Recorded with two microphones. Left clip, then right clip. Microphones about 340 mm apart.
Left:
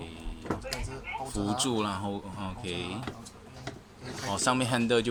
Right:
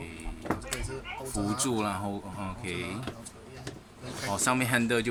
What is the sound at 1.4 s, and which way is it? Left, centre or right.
Speech, centre.